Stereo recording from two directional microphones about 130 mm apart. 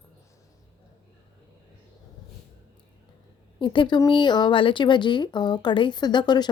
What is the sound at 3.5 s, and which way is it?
A woman's voice, 40° left (ahead or behind).